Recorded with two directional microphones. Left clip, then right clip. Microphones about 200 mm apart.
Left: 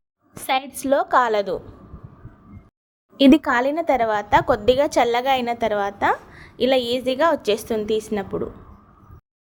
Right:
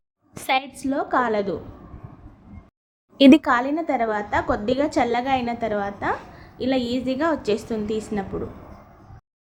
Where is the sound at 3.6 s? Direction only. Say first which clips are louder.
Left 4 dB; 50° left (ahead or behind).